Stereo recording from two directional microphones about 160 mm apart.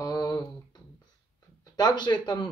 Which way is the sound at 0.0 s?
25° left (ahead or behind).